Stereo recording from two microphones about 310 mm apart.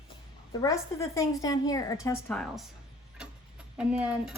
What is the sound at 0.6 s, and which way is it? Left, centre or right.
A woman's voice, centre.